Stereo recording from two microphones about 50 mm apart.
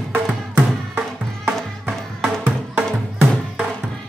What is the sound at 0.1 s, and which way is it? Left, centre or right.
Music, right.